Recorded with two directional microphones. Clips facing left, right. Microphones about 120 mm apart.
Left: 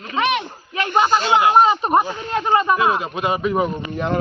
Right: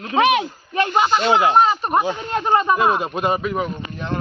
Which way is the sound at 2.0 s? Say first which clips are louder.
Right 3 dB; 15° right (ahead or behind).